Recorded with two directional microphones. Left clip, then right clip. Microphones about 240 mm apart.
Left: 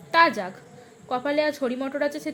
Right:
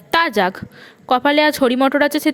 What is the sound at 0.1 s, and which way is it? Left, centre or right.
A woman's voice, right.